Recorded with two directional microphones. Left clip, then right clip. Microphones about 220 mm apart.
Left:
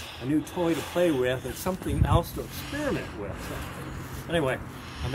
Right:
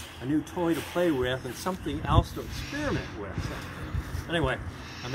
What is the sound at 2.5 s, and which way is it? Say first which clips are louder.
Speech: left 1 dB; 5° left (ahead or behind).